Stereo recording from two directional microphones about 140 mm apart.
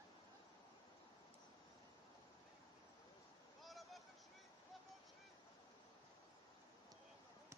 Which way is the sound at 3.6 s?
Centre (ahead or behind).